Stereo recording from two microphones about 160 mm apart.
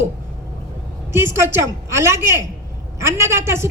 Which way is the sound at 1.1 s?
15° right (ahead or behind).